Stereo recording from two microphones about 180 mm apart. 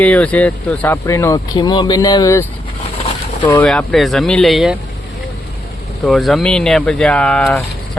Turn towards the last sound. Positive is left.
turn(degrees=5)  # may be behind; listen again after turning